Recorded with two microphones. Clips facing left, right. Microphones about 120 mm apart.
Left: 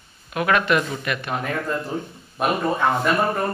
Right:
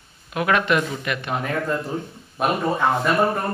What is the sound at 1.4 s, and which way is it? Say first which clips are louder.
Speech: right 1 dB; centre (ahead or behind).